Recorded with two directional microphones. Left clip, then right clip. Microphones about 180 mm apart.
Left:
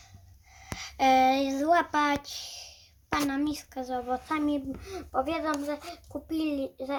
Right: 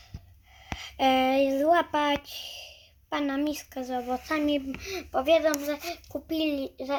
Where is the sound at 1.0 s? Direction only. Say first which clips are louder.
Left 1 dB; 25° right (ahead or behind).